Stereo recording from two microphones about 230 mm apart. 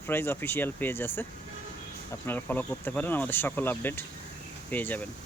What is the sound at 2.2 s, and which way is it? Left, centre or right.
Speech, centre.